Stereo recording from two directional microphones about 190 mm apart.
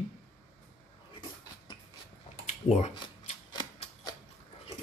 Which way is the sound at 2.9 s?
30° left (ahead or behind).